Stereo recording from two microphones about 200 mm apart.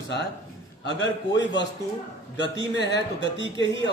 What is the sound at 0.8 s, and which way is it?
Speech, 65° left (ahead or behind).